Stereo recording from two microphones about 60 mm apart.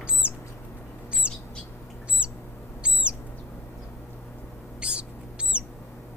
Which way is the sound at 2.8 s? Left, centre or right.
Centre.